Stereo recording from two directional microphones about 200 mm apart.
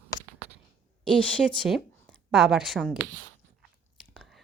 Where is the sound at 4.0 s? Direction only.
Centre (ahead or behind).